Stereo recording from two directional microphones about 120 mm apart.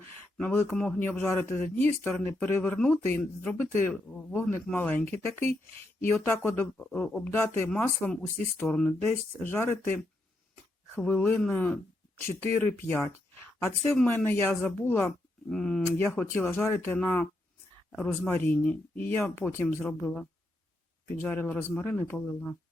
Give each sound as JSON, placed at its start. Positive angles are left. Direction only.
{"t": 0.3, "sound": "speech", "side_deg": 15}
{"t": 9.0, "sound": "speech", "side_deg": 20}